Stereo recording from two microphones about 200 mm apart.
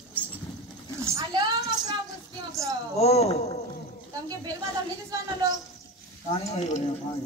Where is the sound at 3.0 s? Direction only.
30° left (ahead or behind).